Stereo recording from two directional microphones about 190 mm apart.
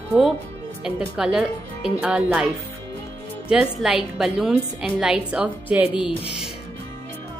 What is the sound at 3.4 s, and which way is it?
A woman's voice, centre (ahead or behind).